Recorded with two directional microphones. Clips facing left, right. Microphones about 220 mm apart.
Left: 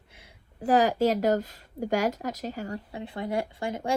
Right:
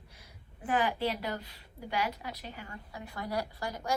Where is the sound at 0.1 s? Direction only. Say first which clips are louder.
Left 2 dB; 25° left (ahead or behind).